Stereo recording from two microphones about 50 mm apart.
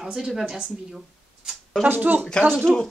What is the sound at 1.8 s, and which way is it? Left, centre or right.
Speech, right.